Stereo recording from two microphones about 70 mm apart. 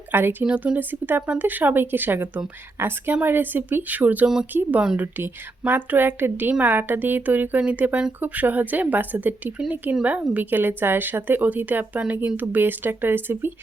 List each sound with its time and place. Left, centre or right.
0.1 s speech: right
0.4 s a woman's voice: centre
10.3 s a woman's voice: right